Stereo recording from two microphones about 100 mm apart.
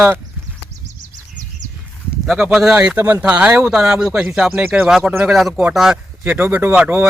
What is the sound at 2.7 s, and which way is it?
Speech, 20° right (ahead or behind).